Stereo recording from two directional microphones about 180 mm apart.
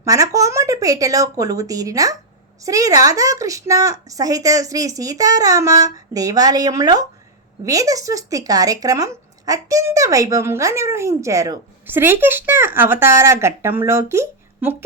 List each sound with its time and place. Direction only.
0.0 s a woman's voice: 20° right (ahead or behind)